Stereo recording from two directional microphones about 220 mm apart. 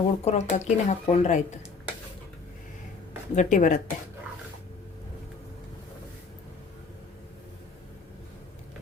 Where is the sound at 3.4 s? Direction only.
35° left (ahead or behind).